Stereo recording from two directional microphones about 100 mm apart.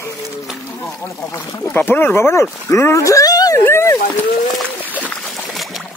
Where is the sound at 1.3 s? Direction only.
30° left (ahead or behind).